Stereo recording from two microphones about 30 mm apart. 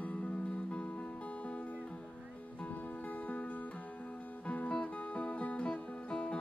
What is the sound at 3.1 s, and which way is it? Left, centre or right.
Music, left.